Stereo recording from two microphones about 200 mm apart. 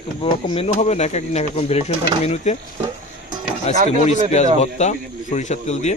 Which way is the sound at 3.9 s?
35° left (ahead or behind).